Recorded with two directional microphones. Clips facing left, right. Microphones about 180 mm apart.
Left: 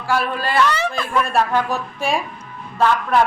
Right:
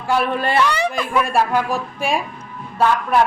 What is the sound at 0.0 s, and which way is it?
Speech, 20° right (ahead or behind).